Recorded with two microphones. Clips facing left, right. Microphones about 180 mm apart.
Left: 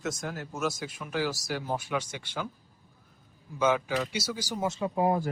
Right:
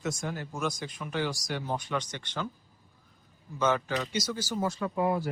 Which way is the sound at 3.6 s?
10° left (ahead or behind).